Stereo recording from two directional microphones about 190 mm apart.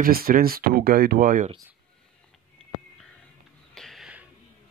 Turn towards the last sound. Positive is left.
turn(degrees=0)  # may be behind; listen again after turning